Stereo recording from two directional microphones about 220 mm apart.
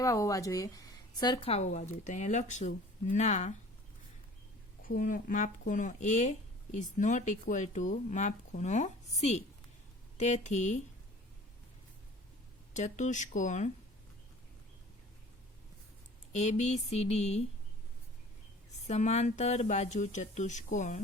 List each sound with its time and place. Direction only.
0.0 s a woman's voice: 15° left (ahead or behind); by 3.5 s 30° left (ahead or behind)
4.8 s a woman's voice: 40° left (ahead or behind)
12.7 s a woman's voice: 35° left (ahead or behind)
16.3 s speech: 30° left (ahead or behind)
18.9 s a woman's voice: 30° left (ahead or behind)